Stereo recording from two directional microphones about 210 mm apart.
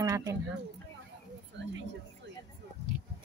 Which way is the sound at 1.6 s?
55° right (ahead or behind).